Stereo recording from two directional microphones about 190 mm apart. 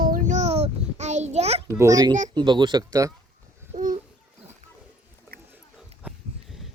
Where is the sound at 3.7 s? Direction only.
40° right (ahead or behind).